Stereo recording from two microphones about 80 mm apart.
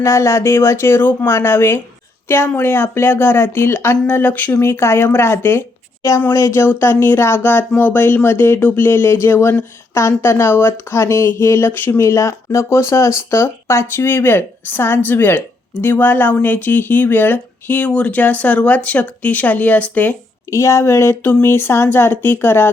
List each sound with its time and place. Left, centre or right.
0.0 s speech: left
20.5 s speech: left